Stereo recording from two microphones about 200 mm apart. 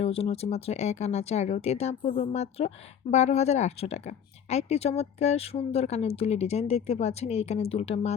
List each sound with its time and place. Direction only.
0.0 s speech: 30° left (ahead or behind)